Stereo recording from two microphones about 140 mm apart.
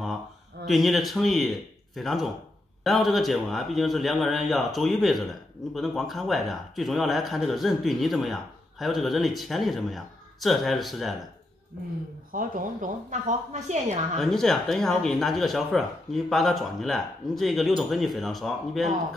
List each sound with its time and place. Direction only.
0.7 s speech: centre (ahead or behind)
12.3 s a woman's voice: 80° right; by 13.9 s 55° right (ahead or behind)
14.1 s speech: centre (ahead or behind)